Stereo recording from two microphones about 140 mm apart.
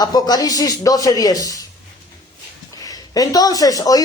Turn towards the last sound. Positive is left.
turn(degrees=25)  # may be behind; listen again after turning